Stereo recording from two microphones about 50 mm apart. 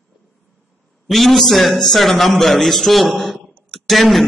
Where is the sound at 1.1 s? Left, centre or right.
Centre.